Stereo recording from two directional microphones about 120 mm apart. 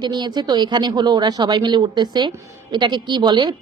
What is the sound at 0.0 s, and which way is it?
Speech, 35° right (ahead or behind).